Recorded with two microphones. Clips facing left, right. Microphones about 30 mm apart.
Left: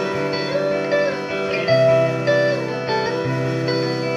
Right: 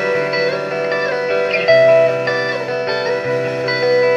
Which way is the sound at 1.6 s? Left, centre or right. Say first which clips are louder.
Right 5 dB; right.